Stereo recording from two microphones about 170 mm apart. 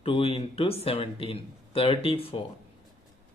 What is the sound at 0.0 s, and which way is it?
Speech, 30° left (ahead or behind).